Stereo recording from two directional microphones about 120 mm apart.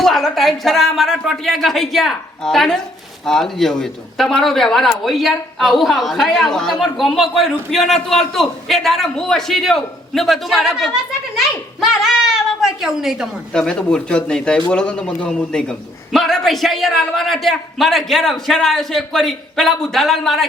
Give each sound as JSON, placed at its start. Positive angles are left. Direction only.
{"t": 0.0, "sound": "a man's voice", "side_deg": 0}
{"t": 13.5, "sound": "a man's voice", "side_deg": 5}